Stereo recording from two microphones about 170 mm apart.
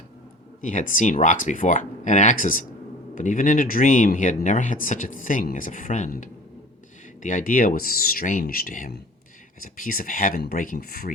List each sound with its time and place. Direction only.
0.6 s speech: 50° left (ahead or behind)